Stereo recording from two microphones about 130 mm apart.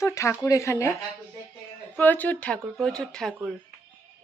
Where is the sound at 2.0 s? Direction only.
15° left (ahead or behind).